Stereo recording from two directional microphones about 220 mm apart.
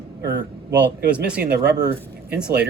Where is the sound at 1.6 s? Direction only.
50° right (ahead or behind).